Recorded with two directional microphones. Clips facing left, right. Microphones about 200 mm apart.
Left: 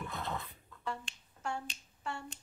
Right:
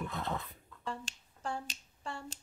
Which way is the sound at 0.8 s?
35° right (ahead or behind).